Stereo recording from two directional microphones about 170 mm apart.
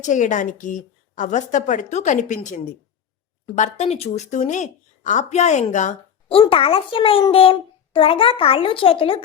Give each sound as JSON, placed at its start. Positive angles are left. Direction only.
{"t": 0.0, "sound": "a child's voice", "side_deg": 45}